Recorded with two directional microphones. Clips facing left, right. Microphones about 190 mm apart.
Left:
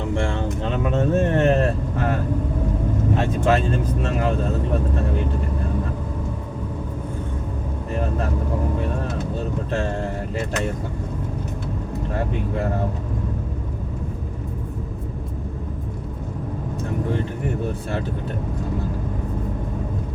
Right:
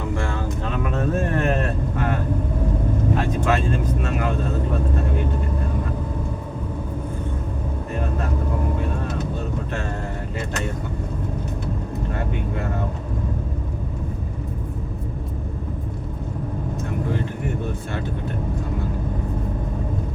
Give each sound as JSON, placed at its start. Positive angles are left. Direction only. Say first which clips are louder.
{"t": 0.1, "sound": "vehicle", "louder": "left 2 dB", "side_deg": 25}
{"t": 0.6, "sound": "a sound", "louder": "left 3 dB", "side_deg": 25}
{"t": 3.2, "sound": "speech", "louder": "left 5 dB", "side_deg": 30}
{"t": 9.7, "sound": "speech", "louder": "left 4 dB", "side_deg": 35}